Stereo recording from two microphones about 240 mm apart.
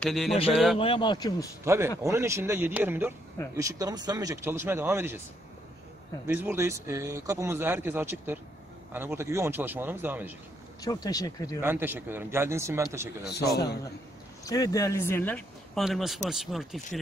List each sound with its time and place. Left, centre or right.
0.0 s speech: centre
0.7 s a man's voice: left
1.6 s speech: centre
6.2 s speech: centre
10.8 s speech: centre
11.6 s speech: centre
13.5 s a man's voice: left
14.4 s speech: centre